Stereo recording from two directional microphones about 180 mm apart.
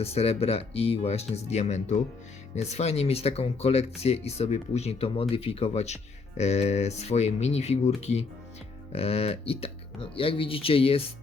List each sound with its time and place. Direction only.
0.0 s speech: 35° left (ahead or behind)